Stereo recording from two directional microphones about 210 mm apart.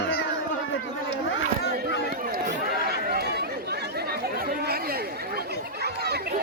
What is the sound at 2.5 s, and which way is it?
Chatter, 50° right (ahead or behind).